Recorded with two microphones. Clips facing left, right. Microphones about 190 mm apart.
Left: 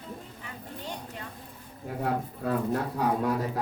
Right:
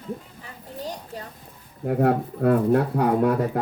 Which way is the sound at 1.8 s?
60° right (ahead or behind).